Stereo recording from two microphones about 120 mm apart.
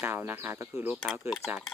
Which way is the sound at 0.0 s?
15° right (ahead or behind).